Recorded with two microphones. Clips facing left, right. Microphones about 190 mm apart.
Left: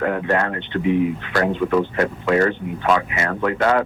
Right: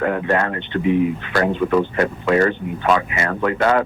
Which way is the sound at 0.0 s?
15° right (ahead or behind).